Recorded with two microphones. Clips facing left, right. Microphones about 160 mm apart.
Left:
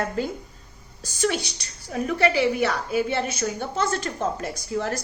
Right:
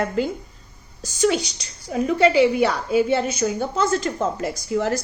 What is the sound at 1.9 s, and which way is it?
A woman's voice, 25° right (ahead or behind).